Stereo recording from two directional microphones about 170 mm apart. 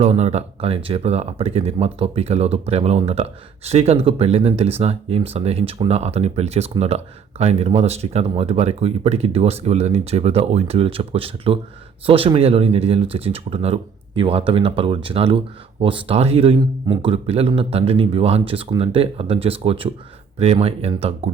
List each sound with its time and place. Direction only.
0.0 s speech: 40° right (ahead or behind)